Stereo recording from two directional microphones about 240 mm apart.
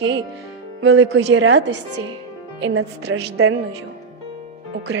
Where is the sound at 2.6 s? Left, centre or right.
Right.